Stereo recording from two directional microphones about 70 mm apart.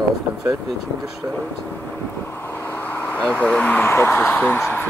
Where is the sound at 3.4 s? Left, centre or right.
Centre.